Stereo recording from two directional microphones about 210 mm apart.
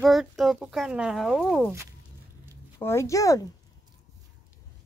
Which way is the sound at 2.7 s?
15° left (ahead or behind).